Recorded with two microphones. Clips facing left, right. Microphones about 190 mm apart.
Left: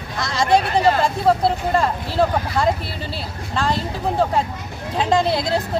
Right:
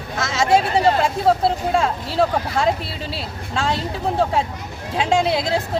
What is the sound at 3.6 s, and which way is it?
Speech, centre (ahead or behind).